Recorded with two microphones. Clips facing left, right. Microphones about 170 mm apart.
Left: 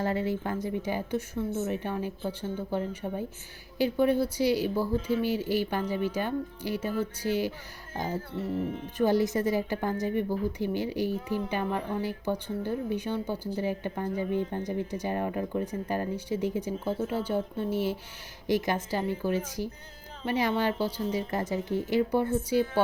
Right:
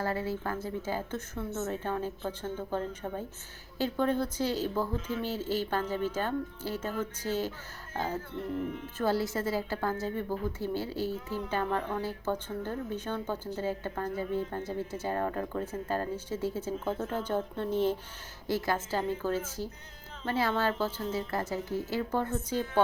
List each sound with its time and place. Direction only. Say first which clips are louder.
0.0 s a woman's voice: left 3 dB; 20° left (ahead or behind)
8.4 s speech: left 3 dB; 35° left (ahead or behind)
9.0 s a woman's voice: left 5 dB; 15° left (ahead or behind)